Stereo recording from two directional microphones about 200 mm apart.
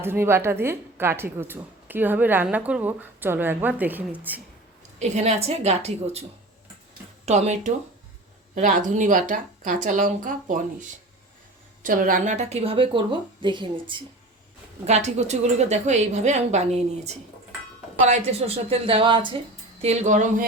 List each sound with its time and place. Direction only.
0.0 s a woman's voice: 10° right (ahead or behind)
4.9 s speech: 35° right (ahead or behind)
7.3 s speech: 35° right (ahead or behind)
14.8 s speech: 35° right (ahead or behind)
18.0 s a woman's voice: 35° right (ahead or behind)